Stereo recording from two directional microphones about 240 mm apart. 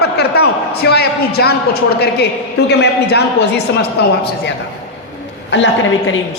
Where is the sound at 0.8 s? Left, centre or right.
Left.